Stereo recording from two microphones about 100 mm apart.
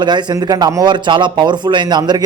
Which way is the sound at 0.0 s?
50° right (ahead or behind).